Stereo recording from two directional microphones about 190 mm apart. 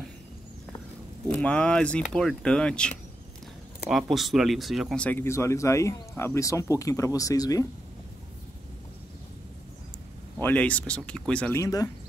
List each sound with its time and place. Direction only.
1.3 s speech: 5° left (ahead or behind)
3.9 s speech: centre (ahead or behind); by 7.6 s 20° left (ahead or behind)
10.4 s speech: 5° left (ahead or behind)